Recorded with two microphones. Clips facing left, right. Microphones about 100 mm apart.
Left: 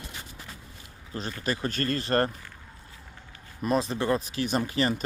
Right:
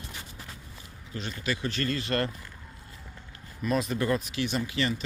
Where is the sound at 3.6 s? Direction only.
35° left (ahead or behind).